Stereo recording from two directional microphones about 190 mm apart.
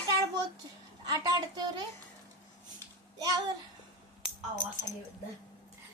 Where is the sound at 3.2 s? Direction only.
20° right (ahead or behind).